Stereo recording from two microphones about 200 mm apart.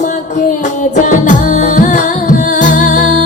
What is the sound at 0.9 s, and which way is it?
Music, 40° left (ahead or behind).